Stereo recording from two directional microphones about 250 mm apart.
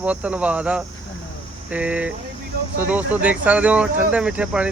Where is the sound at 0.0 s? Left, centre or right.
Centre.